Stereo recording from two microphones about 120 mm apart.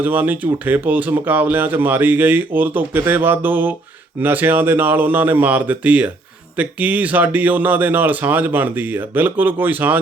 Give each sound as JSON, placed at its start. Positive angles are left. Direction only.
{"t": 0.0, "sound": "speech", "side_deg": -15}